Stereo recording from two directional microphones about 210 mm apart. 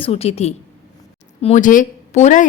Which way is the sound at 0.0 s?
30° left (ahead or behind).